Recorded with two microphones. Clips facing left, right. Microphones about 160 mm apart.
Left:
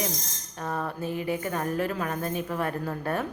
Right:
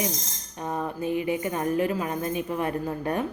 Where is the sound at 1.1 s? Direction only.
45° left (ahead or behind).